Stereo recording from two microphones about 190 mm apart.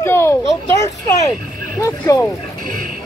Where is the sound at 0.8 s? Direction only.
15° left (ahead or behind).